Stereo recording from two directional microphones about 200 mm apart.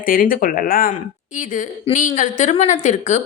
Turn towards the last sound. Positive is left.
turn(degrees=35)  # may be behind; listen again after turning